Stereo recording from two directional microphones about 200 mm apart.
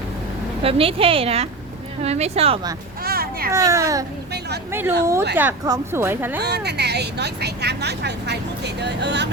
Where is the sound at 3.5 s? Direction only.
15° right (ahead or behind).